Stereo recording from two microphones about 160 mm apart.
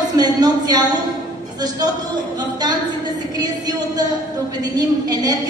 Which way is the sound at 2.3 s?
25° right (ahead or behind).